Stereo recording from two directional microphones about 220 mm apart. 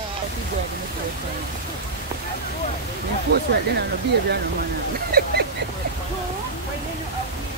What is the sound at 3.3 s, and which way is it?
Speech, 50° right (ahead or behind).